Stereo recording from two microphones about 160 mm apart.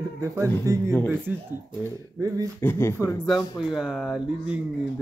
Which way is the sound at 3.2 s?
Centre (ahead or behind).